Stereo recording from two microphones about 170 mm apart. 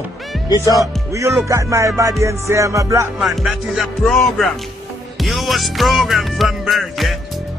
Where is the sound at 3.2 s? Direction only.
Centre (ahead or behind).